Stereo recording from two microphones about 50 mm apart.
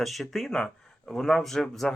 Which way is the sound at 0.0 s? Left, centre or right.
Centre.